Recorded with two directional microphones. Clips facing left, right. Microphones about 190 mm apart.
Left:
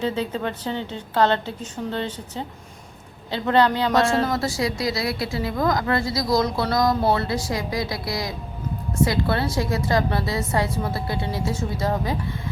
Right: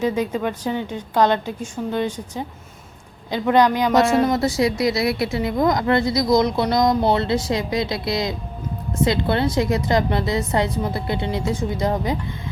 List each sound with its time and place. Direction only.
0.0 s a woman's voice: 15° right (ahead or behind)